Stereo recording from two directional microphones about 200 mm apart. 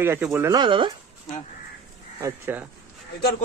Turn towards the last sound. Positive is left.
turn(degrees=50)  # may be behind; listen again after turning